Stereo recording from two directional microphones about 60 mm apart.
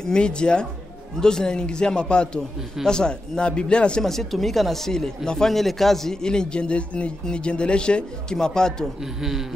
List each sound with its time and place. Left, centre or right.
0.0 s speech: centre
4.0 s speech: centre
9.0 s speech: centre